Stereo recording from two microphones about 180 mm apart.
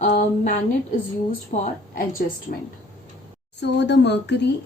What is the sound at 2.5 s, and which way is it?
Speech, 50° left (ahead or behind).